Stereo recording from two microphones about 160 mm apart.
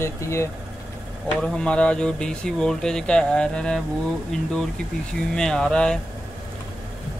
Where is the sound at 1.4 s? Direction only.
5° left (ahead or behind).